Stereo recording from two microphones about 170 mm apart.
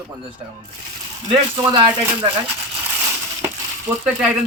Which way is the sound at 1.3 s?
25° right (ahead or behind).